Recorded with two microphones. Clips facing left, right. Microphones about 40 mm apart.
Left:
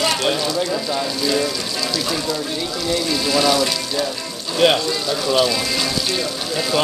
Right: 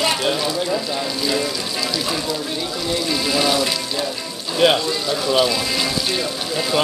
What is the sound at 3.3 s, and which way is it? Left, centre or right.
Speech, centre.